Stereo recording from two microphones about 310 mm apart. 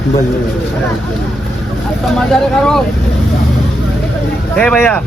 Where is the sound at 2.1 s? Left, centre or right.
Centre.